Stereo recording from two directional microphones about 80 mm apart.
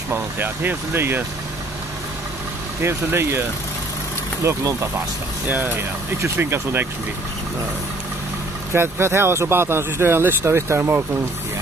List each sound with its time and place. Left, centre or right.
0.1 s speech: right
2.8 s speech: right
4.5 s speech: right
8.7 s speech: right